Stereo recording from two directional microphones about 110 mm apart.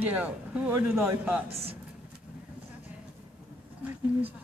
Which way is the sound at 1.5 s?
60° right (ahead or behind).